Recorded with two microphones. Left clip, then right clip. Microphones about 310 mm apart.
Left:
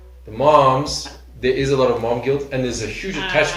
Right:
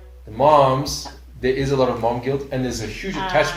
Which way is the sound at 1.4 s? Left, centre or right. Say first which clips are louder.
Left 2 dB; right.